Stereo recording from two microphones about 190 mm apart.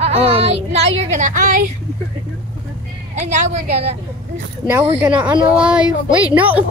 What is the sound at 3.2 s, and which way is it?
Speech, 40° right (ahead or behind).